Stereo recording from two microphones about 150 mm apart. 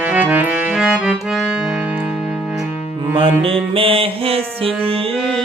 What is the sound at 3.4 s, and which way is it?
Music, 35° right (ahead or behind).